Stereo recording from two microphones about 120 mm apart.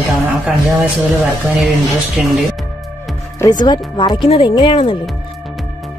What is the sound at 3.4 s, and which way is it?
Speech, 35° left (ahead or behind).